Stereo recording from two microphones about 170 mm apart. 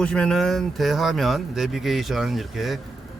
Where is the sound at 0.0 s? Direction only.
5° left (ahead or behind).